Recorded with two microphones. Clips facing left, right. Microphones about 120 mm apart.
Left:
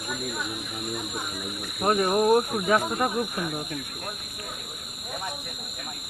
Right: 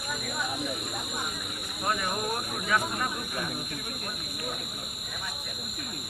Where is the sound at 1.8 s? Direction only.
40° left (ahead or behind).